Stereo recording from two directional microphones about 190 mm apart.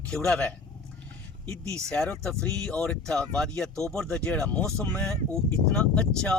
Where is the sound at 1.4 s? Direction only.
15° right (ahead or behind).